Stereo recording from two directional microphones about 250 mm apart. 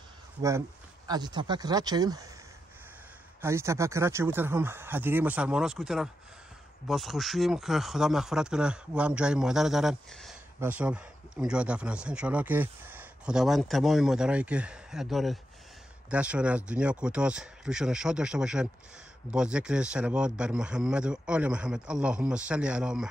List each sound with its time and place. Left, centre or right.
0.4 s speech: centre
3.3 s speech: centre